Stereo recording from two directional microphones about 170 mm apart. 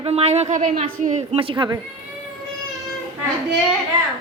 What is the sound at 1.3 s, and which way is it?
Speech, 30° right (ahead or behind).